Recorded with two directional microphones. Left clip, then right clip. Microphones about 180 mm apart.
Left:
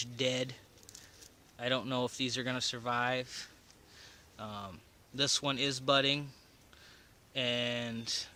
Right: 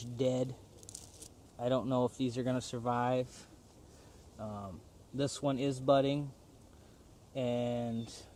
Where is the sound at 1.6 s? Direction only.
50° left (ahead or behind).